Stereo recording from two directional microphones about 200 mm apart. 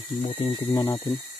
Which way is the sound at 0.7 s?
15° left (ahead or behind).